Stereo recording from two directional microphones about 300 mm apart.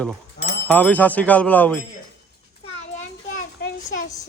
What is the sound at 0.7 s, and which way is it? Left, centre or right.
Speech, centre.